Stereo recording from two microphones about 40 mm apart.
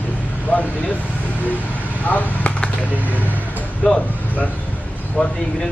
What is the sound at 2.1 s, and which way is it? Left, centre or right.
Speech, left.